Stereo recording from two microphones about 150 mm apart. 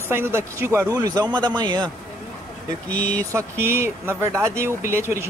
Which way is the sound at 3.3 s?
15° right (ahead or behind).